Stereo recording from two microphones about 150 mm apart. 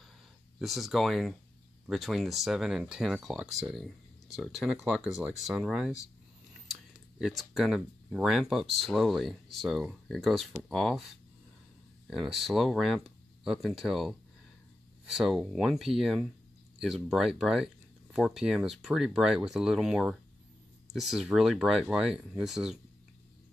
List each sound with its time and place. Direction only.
0.6 s speech: centre (ahead or behind)
12.1 s speech: centre (ahead or behind)